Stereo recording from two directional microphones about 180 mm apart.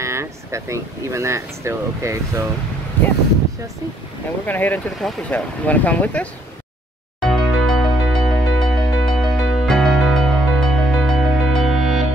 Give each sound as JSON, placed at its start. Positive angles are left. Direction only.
{"t": 0.0, "sound": "speech", "side_deg": -15}
{"t": 4.5, "sound": "speech", "side_deg": 10}
{"t": 7.2, "sound": "music", "side_deg": 0}